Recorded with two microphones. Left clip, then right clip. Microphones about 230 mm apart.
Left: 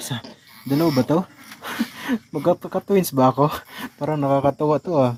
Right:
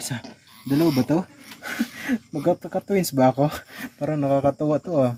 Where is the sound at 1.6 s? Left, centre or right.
Centre.